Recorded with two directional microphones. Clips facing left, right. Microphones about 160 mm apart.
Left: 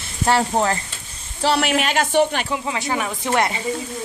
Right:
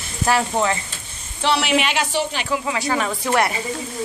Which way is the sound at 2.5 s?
25° left (ahead or behind).